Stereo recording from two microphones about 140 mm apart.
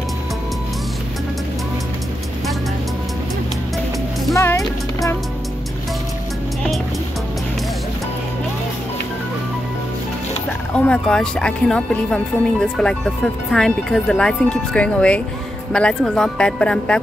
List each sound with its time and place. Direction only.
4.4 s music: 20° left (ahead or behind)
10.7 s speech: 5° left (ahead or behind)